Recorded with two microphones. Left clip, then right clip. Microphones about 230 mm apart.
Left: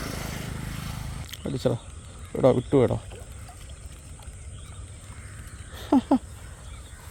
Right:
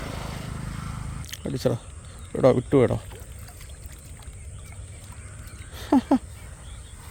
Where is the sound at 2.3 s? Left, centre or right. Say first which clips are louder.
Right 1 dB; centre.